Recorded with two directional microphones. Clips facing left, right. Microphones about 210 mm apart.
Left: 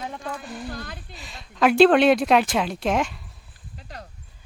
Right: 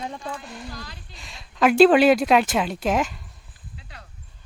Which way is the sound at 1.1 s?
Centre (ahead or behind).